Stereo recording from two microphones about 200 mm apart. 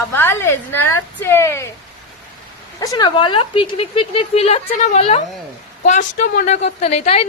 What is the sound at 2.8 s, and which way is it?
A woman's voice, 20° left (ahead or behind).